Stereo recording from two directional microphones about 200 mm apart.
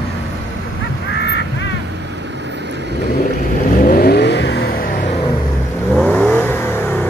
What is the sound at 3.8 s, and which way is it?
Vehicle, 50° left (ahead or behind).